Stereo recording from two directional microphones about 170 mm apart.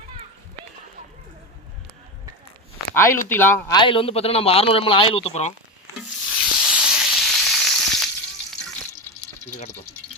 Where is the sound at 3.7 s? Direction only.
30° left (ahead or behind).